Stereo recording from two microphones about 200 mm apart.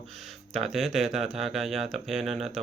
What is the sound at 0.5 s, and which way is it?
Speech, centre (ahead or behind).